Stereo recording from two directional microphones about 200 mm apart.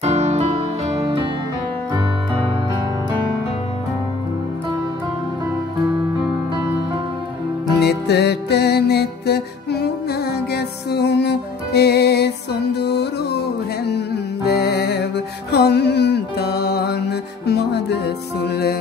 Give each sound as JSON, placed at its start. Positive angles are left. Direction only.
{"t": 0.0, "sound": "music", "side_deg": -35}
{"t": 7.8, "sound": "music", "side_deg": 55}